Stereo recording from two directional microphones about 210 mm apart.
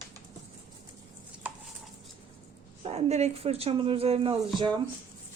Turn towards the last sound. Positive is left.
turn(degrees=-20)  # may be behind; listen again after turning